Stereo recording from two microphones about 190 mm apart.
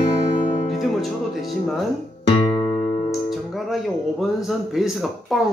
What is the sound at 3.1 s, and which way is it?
Speech, centre (ahead or behind).